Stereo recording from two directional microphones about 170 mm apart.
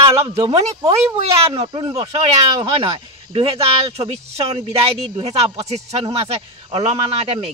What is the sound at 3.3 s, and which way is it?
A man's voice, 35° right (ahead or behind).